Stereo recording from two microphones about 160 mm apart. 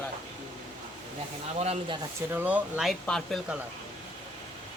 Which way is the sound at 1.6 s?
35° right (ahead or behind).